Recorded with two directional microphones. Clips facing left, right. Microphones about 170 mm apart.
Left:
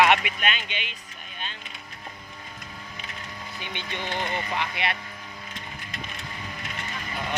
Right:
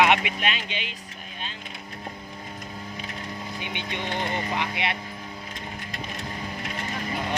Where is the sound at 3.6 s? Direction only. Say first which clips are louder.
Even; 15° right (ahead or behind).